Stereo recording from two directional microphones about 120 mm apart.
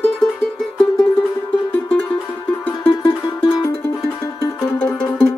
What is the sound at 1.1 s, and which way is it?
Music, 15° left (ahead or behind).